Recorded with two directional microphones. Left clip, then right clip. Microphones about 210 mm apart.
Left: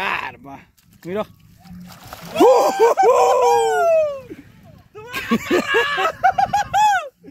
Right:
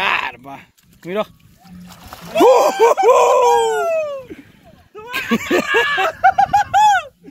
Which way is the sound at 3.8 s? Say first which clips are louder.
Left 3 dB; 35° left (ahead or behind).